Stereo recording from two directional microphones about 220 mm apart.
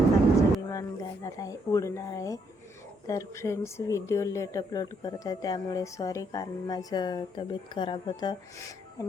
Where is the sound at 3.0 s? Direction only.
15° left (ahead or behind).